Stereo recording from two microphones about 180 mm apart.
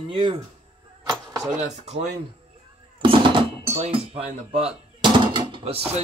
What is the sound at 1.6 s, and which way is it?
Speech, 35° right (ahead or behind).